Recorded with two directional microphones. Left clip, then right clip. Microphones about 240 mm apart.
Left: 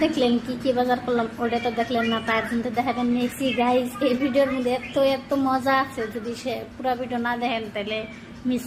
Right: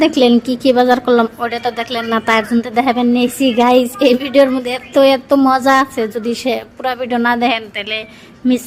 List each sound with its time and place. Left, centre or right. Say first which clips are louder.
0.0 s a woman's voice: right 10 dB; right